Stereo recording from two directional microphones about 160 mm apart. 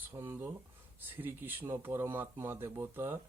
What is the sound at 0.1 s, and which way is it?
Speech, 15° right (ahead or behind).